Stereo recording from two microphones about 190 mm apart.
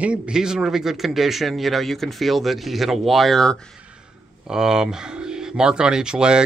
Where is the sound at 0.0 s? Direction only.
5° right (ahead or behind).